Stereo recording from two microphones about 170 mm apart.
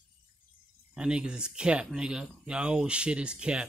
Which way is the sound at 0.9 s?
5° right (ahead or behind).